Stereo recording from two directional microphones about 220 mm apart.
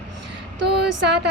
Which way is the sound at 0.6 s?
50° right (ahead or behind).